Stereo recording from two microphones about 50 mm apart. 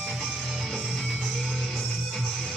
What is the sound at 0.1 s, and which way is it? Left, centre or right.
Music, centre.